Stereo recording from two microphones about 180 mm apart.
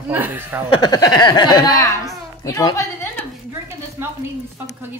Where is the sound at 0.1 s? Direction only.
10° right (ahead or behind).